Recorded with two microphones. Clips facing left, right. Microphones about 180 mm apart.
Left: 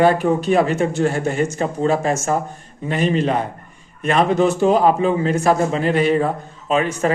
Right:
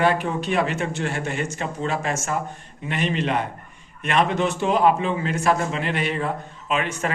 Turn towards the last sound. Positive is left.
turn(degrees=35)  # may be behind; listen again after turning